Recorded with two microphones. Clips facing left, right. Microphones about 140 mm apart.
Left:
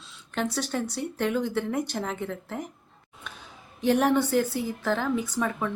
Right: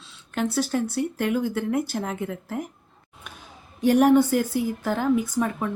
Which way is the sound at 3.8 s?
10° right (ahead or behind).